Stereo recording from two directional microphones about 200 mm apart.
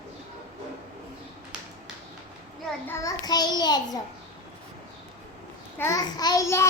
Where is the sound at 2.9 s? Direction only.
15° left (ahead or behind).